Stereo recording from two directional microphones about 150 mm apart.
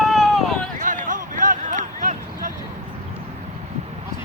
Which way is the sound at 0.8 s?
60° right (ahead or behind).